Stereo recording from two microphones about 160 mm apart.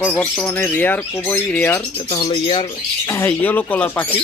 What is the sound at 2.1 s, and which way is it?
Speech, 30° left (ahead or behind).